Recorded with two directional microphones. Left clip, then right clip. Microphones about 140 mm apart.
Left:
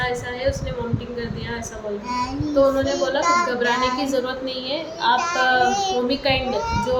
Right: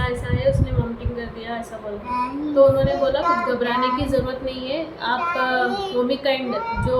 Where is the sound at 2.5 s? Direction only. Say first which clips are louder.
Right 3 dB; 15° left (ahead or behind).